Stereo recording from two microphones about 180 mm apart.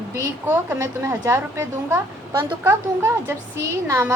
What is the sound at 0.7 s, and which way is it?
A woman's voice, 15° right (ahead or behind).